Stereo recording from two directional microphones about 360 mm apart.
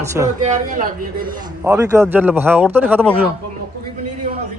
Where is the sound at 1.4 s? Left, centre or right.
Centre.